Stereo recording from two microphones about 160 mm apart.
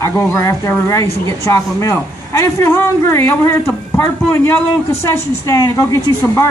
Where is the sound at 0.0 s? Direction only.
20° left (ahead or behind).